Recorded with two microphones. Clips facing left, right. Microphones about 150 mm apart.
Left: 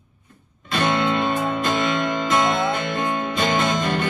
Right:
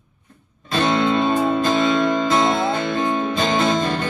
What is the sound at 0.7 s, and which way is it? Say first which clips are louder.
Music: right 3 dB; 25° right (ahead or behind).